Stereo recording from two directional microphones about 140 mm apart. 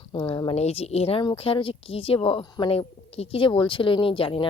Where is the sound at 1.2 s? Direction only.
35° left (ahead or behind).